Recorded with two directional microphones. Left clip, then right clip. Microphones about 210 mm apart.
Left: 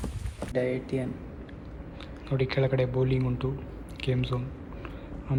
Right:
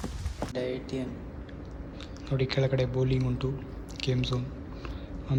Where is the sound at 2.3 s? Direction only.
10° right (ahead or behind).